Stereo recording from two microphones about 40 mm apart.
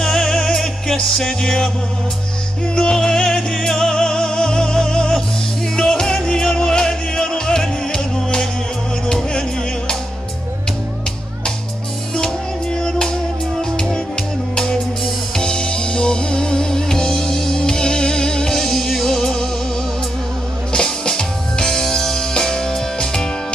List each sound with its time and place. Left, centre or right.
0.0 s music: centre
2.7 s music: centre
12.7 s music: centre
20.7 s music: centre